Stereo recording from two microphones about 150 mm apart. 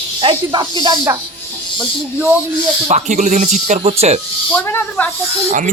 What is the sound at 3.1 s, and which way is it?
Speech, 55° right (ahead or behind).